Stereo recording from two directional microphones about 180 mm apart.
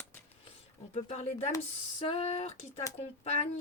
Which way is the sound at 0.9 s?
35° left (ahead or behind).